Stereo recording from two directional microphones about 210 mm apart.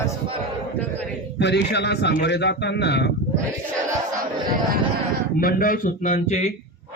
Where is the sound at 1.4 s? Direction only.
55° left (ahead or behind).